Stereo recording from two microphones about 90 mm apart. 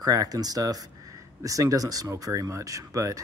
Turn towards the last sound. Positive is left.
turn(degrees=-35)  # may be behind; listen again after turning